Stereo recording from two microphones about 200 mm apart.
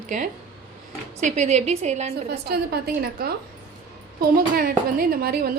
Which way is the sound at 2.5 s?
50° right (ahead or behind).